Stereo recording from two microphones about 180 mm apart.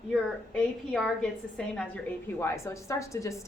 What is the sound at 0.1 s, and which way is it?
A woman's voice, centre (ahead or behind).